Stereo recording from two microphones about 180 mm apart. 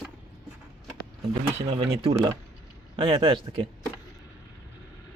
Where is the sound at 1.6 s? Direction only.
35° right (ahead or behind).